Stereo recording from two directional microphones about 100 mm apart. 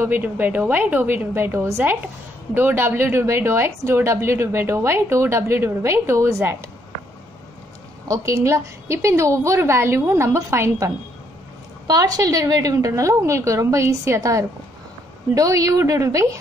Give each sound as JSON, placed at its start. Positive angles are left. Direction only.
{"t": 0.0, "sound": "a woman's voice", "side_deg": -20}
{"t": 8.1, "sound": "a woman's voice", "side_deg": -30}
{"t": 11.9, "sound": "a woman's voice", "side_deg": -40}